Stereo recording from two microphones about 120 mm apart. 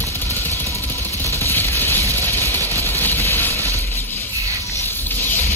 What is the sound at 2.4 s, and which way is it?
Vehicle, 20° left (ahead or behind).